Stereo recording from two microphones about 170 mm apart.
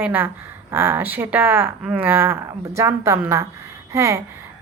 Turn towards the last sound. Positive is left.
turn(degrees=-15)  # may be behind; listen again after turning